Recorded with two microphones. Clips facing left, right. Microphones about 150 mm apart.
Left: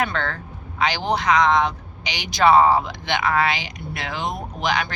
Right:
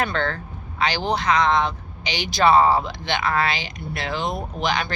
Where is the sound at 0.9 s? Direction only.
15° left (ahead or behind).